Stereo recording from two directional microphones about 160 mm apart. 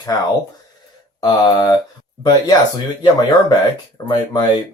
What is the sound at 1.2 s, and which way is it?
Speech, 25° left (ahead or behind).